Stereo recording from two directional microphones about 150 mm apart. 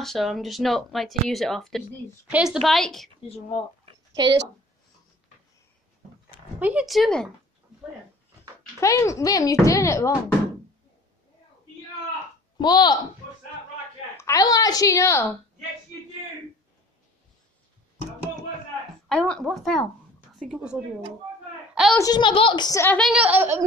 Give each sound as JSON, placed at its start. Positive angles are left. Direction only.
{"t": 0.0, "sound": "speech", "side_deg": 0}
{"t": 3.3, "sound": "speech", "side_deg": 45}
{"t": 4.1, "sound": "speech", "side_deg": -25}
{"t": 6.6, "sound": "speech", "side_deg": -10}
{"t": 8.8, "sound": "speech", "side_deg": 20}
{"t": 12.5, "sound": "speech", "side_deg": 30}
{"t": 14.1, "sound": "speech", "side_deg": 20}
{"t": 19.0, "sound": "speech", "side_deg": 5}
{"t": 21.9, "sound": "speech", "side_deg": 25}
{"t": 23.1, "sound": "speech", "side_deg": -10}